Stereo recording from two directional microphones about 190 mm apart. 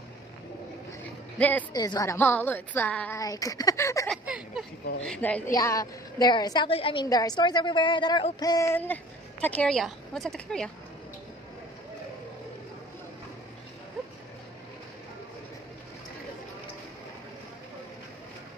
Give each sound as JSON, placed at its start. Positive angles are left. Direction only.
{"t": 1.7, "sound": "a woman's voice", "side_deg": 20}
{"t": 4.1, "sound": "a woman's voice", "side_deg": 0}